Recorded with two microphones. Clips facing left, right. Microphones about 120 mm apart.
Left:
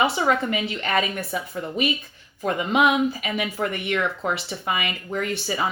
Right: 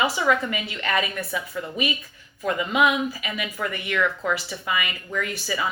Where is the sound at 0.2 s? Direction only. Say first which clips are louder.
Left 1 dB; 35° left (ahead or behind).